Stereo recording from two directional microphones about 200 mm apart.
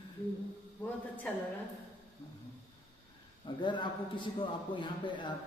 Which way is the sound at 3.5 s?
25° left (ahead or behind).